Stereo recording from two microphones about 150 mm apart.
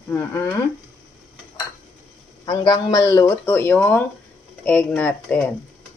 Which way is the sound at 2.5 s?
25° left (ahead or behind).